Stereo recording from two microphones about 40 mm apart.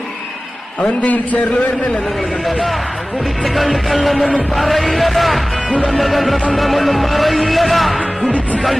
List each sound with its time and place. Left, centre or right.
0.8 s a man's voice: left
3.4 s music: centre